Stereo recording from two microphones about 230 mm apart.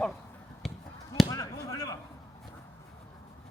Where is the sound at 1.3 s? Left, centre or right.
Centre.